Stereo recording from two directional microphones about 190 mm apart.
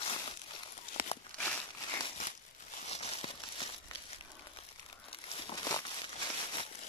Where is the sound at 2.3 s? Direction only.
35° left (ahead or behind).